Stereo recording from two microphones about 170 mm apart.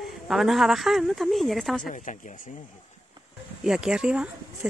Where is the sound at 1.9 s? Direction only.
50° left (ahead or behind).